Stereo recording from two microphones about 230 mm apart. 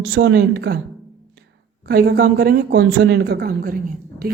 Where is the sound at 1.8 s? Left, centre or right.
Right.